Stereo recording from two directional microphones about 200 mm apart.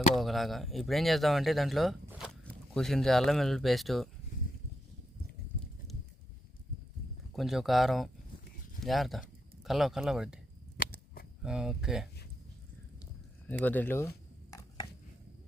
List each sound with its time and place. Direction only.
0.1 s speech: centre (ahead or behind)
7.3 s speech: centre (ahead or behind)
10.8 s a sound: 45° left (ahead or behind)
11.4 s speech: 5° right (ahead or behind)
13.5 s speech: 10° left (ahead or behind)